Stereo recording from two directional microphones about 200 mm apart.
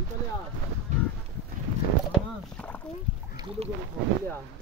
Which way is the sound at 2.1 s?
5° left (ahead or behind).